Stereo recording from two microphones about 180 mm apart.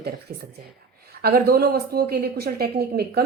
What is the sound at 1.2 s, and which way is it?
A woman's voice, 60° right (ahead or behind).